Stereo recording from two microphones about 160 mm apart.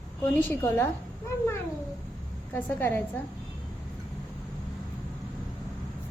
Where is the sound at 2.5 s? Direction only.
15° left (ahead or behind).